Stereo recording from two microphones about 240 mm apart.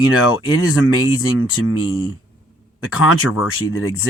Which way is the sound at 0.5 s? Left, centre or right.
Left.